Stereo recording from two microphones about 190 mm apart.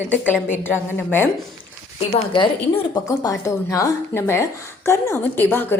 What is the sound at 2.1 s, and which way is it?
A woman's voice, 25° left (ahead or behind).